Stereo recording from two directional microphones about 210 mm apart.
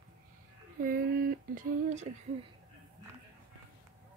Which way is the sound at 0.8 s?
45° right (ahead or behind).